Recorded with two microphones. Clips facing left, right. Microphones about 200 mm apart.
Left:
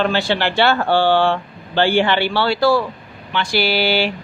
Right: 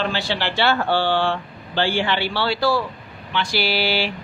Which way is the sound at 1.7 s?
60° left (ahead or behind).